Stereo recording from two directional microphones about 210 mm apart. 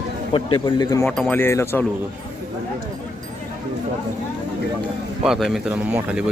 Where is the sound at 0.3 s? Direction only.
20° left (ahead or behind).